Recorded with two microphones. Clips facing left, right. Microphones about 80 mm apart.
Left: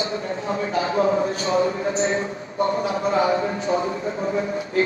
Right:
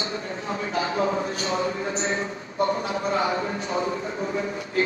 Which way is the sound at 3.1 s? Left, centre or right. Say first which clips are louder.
Left 4 dB; left.